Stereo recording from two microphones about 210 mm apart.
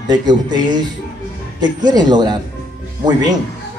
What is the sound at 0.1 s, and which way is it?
Speech, 20° right (ahead or behind).